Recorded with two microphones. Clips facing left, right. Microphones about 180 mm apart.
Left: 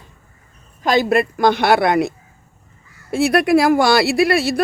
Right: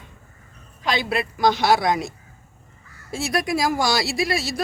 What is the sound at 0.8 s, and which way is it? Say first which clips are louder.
Speech: left 8 dB; 45° left (ahead or behind).